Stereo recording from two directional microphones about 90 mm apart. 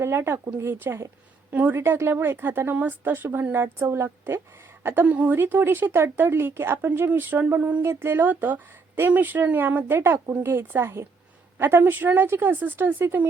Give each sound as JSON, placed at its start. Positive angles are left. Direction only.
{"t": 0.0, "sound": "a woman's voice", "side_deg": -30}